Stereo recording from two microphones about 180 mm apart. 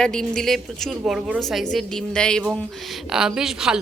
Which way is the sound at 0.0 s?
5° left (ahead or behind).